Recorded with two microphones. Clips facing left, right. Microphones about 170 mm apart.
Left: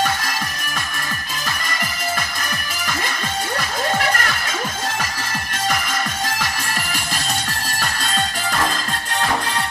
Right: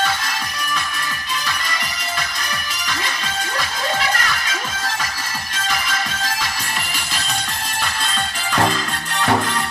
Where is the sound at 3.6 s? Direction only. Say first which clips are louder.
Left 1 dB; 50° left (ahead or behind).